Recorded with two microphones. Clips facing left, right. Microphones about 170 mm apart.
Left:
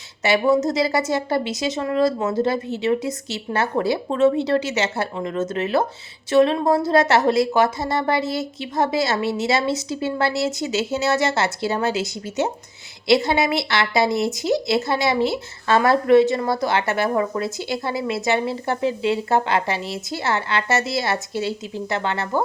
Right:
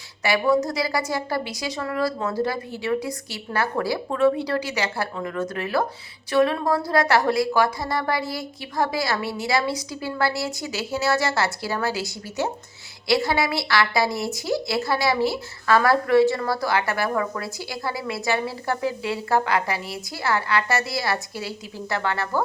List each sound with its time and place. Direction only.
0.2 s a woman's voice: 25° left (ahead or behind)